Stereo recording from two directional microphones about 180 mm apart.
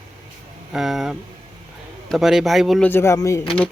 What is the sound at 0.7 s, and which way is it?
Speech, centre (ahead or behind).